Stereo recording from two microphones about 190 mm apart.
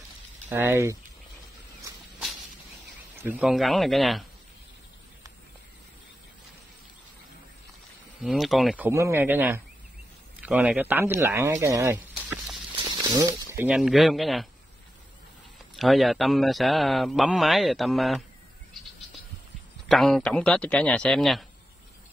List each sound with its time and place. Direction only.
0.5 s speech: 10° right (ahead or behind)
3.2 s speech: 10° right (ahead or behind)
8.2 s speech: centre (ahead or behind)
8.8 s speech: 15° right (ahead or behind)
12.7 s snake: 20° right (ahead or behind)
13.7 s speech: centre (ahead or behind)
15.7 s speech: centre (ahead or behind)
19.9 s speech: centre (ahead or behind)